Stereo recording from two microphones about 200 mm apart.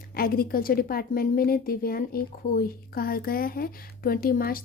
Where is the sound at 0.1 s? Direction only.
50° left (ahead or behind).